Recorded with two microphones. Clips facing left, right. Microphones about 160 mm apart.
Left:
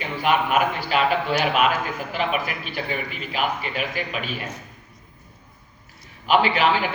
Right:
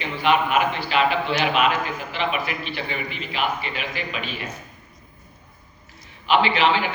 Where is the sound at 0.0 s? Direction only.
45° left (ahead or behind).